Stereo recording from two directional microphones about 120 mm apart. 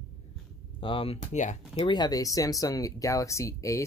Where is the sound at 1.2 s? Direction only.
75° left (ahead or behind).